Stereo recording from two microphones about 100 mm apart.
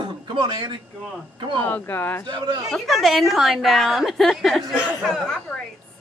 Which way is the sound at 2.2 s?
50° right (ahead or behind).